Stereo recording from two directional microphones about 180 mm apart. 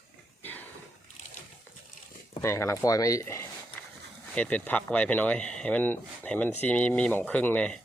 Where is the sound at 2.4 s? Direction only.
15° left (ahead or behind).